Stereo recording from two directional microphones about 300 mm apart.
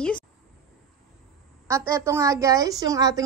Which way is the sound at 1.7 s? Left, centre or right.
Centre.